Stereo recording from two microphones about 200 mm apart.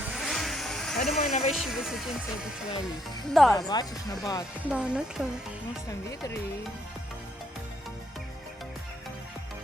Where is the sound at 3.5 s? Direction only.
20° left (ahead or behind).